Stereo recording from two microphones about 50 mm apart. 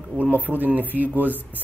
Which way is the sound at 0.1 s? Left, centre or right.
Right.